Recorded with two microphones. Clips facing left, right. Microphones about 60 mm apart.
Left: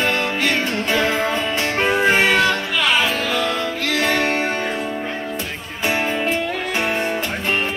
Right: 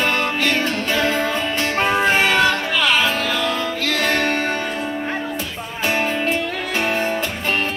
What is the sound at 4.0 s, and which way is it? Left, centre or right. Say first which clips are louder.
Music: left 1 dB; centre.